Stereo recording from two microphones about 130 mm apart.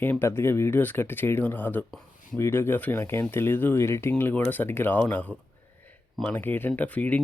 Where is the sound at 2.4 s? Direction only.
15° left (ahead or behind).